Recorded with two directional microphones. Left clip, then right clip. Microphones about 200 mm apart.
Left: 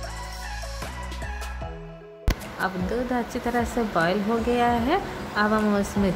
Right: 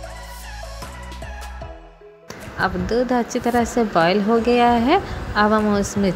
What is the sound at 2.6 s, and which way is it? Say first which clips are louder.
Speech: right 8 dB; 15° right (ahead or behind).